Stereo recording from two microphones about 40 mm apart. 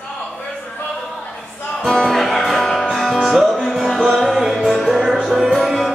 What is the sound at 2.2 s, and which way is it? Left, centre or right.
Music, centre.